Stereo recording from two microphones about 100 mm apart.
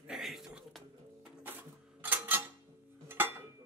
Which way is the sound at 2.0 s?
20° right (ahead or behind).